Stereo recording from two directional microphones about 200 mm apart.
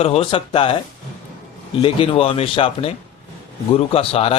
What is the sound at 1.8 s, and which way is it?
A man's voice, 30° left (ahead or behind).